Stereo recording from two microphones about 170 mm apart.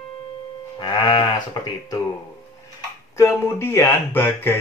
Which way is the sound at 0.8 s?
25° left (ahead or behind).